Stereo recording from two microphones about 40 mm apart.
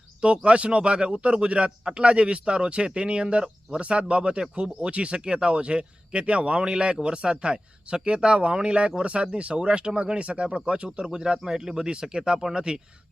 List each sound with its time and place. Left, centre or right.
0.2 s speech: right